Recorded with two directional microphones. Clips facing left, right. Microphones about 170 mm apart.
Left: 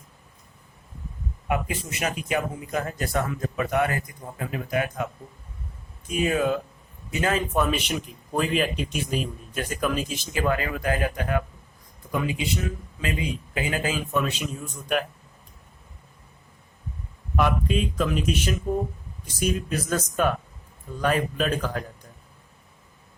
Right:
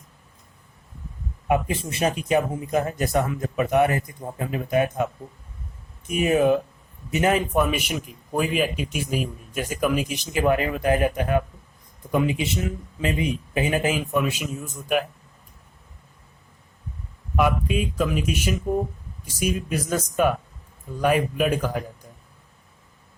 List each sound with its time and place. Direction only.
1.5 s a man's voice: 25° right (ahead or behind); by 15.0 s 5° right (ahead or behind)
17.3 s a man's voice: 5° right (ahead or behind)